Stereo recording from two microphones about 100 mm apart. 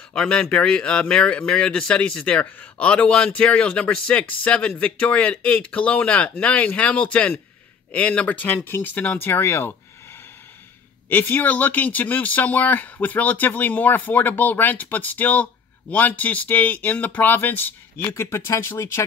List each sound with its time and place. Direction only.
0.1 s speech: 10° left (ahead or behind); by 9.8 s 25° left (ahead or behind)
11.1 s speech: 20° left (ahead or behind)